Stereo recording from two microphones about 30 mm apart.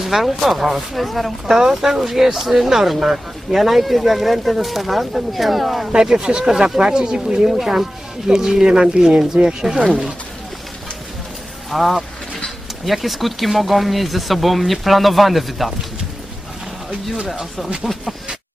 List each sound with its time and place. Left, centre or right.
0.0 s speech: centre
1.5 s speech: centre
3.6 s speech: centre
5.9 s speech: right
11.7 s speech: centre
17.9 s a sound: centre